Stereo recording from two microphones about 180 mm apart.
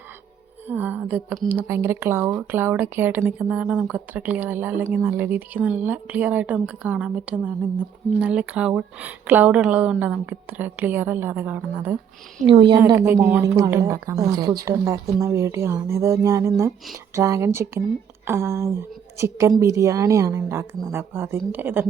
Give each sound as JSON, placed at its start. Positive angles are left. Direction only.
{"t": 0.7, "sound": "speech", "side_deg": -10}
{"t": 12.5, "sound": "a woman's voice", "side_deg": -25}
{"t": 12.8, "sound": "speech", "side_deg": -15}